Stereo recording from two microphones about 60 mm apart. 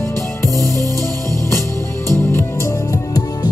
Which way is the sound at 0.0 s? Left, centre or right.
Left.